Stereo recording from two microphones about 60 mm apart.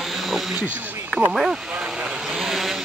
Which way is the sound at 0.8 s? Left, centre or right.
Right.